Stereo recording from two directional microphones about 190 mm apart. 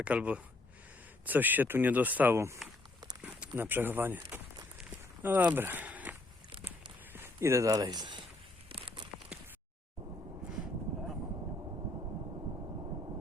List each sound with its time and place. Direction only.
0.0 s speech: 5° right (ahead or behind)
4.8 s walk: 10° right (ahead or behind)
7.1 s speech: 10° right (ahead or behind)
8.7 s a sound: 30° right (ahead or behind)